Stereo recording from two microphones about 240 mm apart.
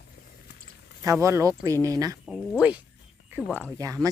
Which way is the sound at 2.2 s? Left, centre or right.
Centre.